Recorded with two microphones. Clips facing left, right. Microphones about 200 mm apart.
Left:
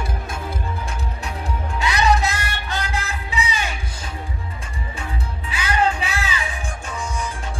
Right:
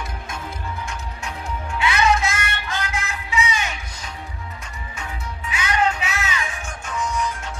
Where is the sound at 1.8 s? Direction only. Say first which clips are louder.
Even; 40° left (ahead or behind).